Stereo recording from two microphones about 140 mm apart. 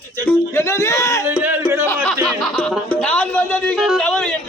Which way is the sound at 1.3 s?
15° right (ahead or behind).